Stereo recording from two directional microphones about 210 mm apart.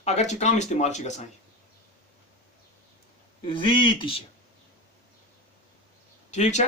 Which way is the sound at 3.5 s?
25° left (ahead or behind).